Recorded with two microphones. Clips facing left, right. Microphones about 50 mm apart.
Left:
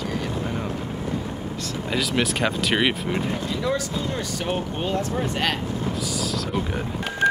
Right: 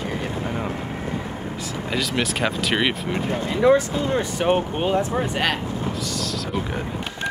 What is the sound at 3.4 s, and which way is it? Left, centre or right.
Speech, right.